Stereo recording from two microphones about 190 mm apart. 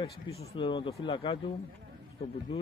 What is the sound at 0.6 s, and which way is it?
Speech, 25° left (ahead or behind).